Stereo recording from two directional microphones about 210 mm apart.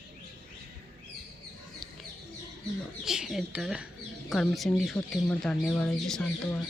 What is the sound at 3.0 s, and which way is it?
Speech, centre (ahead or behind).